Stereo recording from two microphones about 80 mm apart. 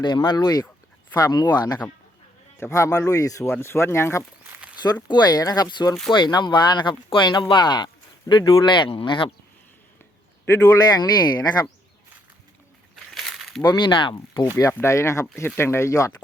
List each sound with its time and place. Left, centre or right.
0.0 s speech: left
0.4 s speech: left
2.6 s speech: left
3.6 s speech: left
5.0 s speech: left
6.1 s speech: left
8.7 s speech: left
10.4 s speech: left
10.8 s speech: left
13.1 s a sound: centre
13.7 s speech: left
14.8 s speech: left